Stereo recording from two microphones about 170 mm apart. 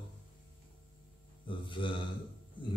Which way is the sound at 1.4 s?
30° left (ahead or behind).